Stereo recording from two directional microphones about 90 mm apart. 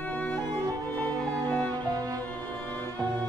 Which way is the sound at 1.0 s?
15° left (ahead or behind).